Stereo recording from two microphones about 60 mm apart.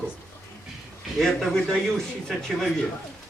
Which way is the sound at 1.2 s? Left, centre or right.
Centre.